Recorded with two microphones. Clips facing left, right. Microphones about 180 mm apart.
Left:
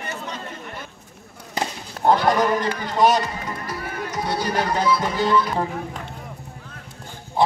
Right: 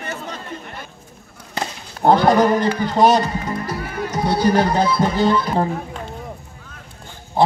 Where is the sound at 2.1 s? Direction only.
30° right (ahead or behind).